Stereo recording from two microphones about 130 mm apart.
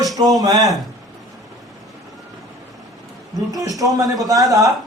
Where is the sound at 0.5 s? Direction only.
Centre (ahead or behind).